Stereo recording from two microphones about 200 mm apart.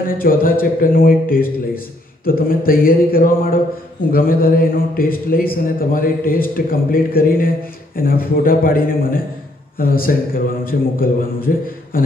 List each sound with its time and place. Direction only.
0.0 s a man's voice: 45° left (ahead or behind)